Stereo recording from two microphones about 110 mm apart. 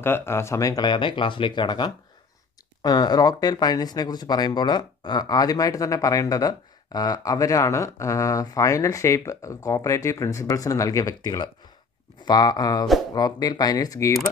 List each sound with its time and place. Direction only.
0.0 s speech: 20° left (ahead or behind)